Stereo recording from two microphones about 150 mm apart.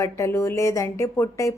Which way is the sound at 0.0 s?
20° left (ahead or behind).